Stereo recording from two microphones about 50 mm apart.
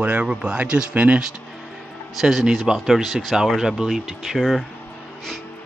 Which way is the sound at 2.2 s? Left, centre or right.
Centre.